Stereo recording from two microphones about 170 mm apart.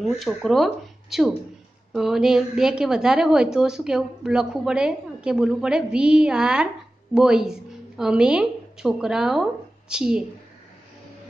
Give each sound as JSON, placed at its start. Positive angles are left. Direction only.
{"t": 0.1, "sound": "a woman's voice", "side_deg": 0}